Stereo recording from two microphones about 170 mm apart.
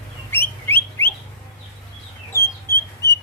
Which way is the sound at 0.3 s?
15° left (ahead or behind).